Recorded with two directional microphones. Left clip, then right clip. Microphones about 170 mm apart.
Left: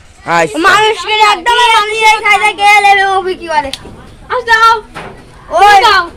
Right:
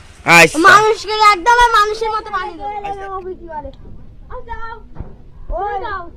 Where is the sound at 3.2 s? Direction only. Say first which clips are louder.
Left 14 dB; 35° left (ahead or behind).